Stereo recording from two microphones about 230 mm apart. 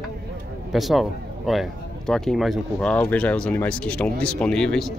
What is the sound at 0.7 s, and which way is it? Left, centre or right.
A man's voice, centre.